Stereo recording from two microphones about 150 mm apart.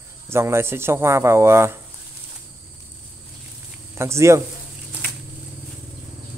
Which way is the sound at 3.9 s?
20° right (ahead or behind).